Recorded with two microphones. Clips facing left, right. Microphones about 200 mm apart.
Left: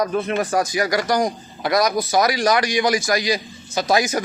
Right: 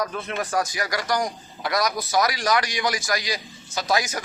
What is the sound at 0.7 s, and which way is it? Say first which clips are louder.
A man's voice: left 6 dB; 15° left (ahead or behind).